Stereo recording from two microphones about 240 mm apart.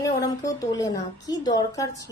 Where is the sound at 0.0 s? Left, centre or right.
Centre.